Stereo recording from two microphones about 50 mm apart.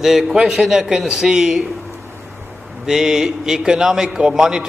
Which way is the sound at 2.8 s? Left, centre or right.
Centre.